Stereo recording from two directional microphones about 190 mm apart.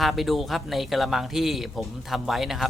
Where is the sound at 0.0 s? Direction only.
Centre (ahead or behind).